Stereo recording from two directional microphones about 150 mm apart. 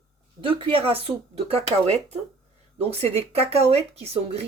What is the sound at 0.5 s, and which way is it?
A woman's voice, 35° right (ahead or behind).